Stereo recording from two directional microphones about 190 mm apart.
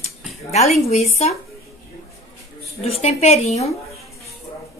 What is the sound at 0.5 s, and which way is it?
Speech, 35° left (ahead or behind).